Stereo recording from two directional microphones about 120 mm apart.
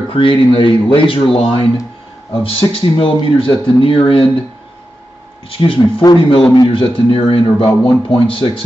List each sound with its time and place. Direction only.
0.1 s speech: 50° left (ahead or behind)
5.5 s speech: 50° left (ahead or behind)